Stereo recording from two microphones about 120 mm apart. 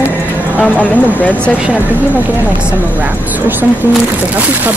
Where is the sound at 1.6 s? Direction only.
15° right (ahead or behind).